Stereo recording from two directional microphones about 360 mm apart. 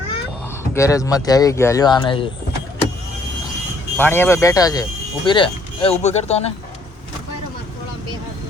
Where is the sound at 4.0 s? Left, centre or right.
Centre.